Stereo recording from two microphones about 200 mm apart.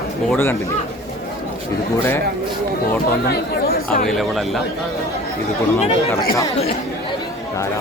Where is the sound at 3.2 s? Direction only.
50° left (ahead or behind).